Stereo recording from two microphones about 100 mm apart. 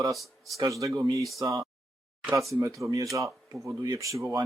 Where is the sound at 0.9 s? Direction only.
45° right (ahead or behind).